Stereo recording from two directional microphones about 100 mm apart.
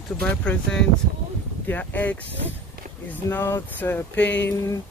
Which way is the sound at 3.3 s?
25° left (ahead or behind).